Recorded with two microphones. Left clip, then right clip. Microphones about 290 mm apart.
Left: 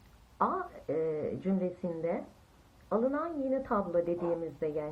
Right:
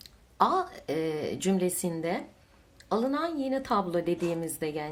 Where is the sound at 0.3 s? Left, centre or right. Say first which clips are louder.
Right 6 dB; right.